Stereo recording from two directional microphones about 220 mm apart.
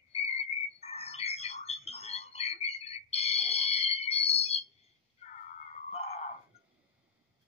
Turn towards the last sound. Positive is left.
turn(degrees=30)  # may be behind; listen again after turning